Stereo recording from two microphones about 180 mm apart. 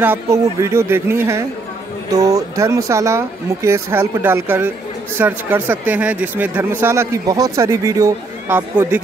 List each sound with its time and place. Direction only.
0.0 s speech: 15° right (ahead or behind)